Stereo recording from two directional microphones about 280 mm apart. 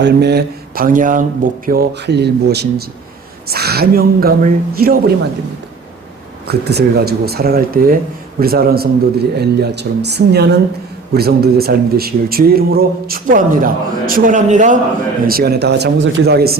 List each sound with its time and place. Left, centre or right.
0.0 s speech: right
6.5 s speech: right